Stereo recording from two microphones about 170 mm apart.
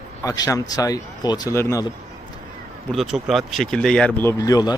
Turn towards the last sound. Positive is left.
turn(degrees=20)  # may be behind; listen again after turning